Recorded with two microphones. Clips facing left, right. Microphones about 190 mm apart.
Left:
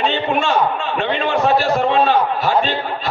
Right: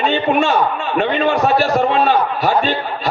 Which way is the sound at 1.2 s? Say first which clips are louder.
Even; 45° right (ahead or behind).